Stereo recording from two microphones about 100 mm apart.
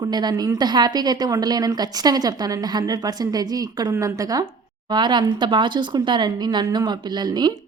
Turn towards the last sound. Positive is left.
turn(degrees=-45)  # may be behind; listen again after turning